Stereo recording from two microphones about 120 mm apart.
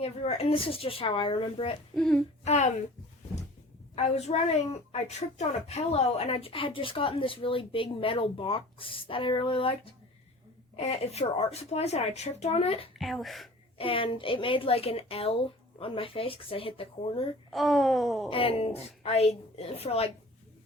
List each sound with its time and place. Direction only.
0.0 s a woman's voice: 55° left (ahead or behind)
2.0 s a sound: 5° left (ahead or behind)
2.4 s speech: 70° left (ahead or behind)
3.9 s a woman's voice: 60° left (ahead or behind)
10.8 s speech: 60° left (ahead or behind)
13.0 s a sound: centre (ahead or behind)
13.7 s a woman's voice: 50° left (ahead or behind)
17.5 s a sound: centre (ahead or behind)
18.3 s speech: 50° left (ahead or behind)